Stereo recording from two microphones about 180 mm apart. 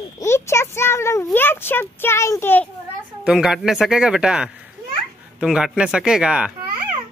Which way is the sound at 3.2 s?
5° right (ahead or behind).